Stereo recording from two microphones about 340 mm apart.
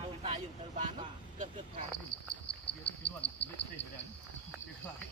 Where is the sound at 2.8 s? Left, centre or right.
Left.